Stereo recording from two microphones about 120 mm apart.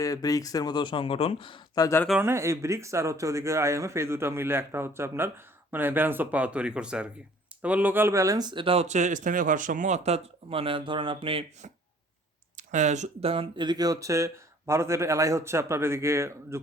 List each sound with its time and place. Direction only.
0.0 s speech: 30° left (ahead or behind)
2.2 s speech: 20° right (ahead or behind); by 11.4 s 50° right (ahead or behind)
12.5 s a sound: 85° right
13.1 s speech: 55° right (ahead or behind)
13.7 s speech: 30° right (ahead or behind)